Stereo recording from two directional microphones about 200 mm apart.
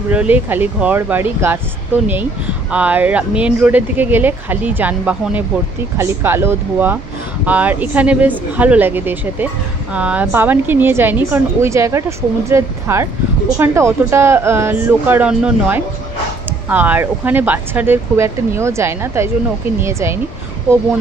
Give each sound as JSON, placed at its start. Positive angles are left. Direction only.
{"t": 0.1, "sound": "a woman's voice", "side_deg": -5}
{"t": 2.7, "sound": "a woman's voice", "side_deg": -10}